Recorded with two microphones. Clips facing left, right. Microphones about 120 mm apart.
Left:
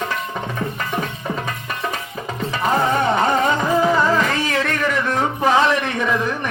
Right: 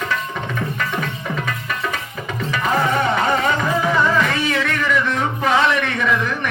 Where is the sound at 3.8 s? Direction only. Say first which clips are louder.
Left 1 dB; 35° left (ahead or behind).